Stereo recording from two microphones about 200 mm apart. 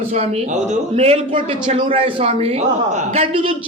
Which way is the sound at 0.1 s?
30° right (ahead or behind).